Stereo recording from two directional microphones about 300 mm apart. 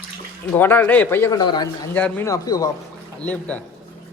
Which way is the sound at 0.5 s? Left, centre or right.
Centre.